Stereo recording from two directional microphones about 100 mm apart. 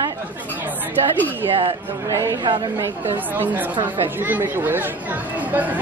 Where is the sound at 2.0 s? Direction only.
35° right (ahead or behind).